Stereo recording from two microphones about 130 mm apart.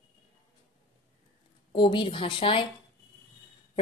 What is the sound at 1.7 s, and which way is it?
Speech, 40° left (ahead or behind).